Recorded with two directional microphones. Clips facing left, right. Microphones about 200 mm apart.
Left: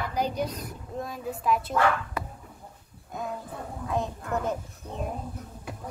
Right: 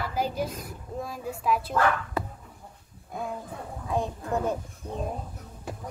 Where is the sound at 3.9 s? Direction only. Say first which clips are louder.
Right 1 dB; 15° right (ahead or behind).